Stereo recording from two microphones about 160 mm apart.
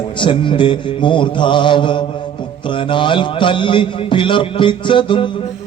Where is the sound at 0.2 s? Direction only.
30° left (ahead or behind).